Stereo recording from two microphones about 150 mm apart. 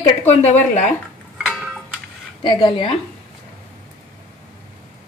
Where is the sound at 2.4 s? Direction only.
30° left (ahead or behind).